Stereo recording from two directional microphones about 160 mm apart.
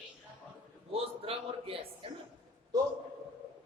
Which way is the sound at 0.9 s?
35° right (ahead or behind).